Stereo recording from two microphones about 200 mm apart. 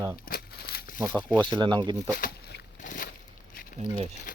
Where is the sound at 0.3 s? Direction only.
50° left (ahead or behind).